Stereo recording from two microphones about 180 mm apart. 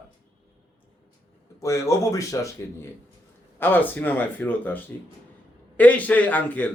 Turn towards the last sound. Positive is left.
turn(degrees=10)  # may be behind; listen again after turning